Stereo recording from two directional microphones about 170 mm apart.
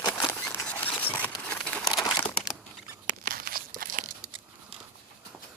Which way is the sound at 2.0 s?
25° left (ahead or behind).